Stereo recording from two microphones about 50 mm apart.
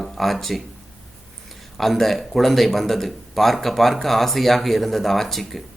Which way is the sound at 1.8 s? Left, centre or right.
Centre.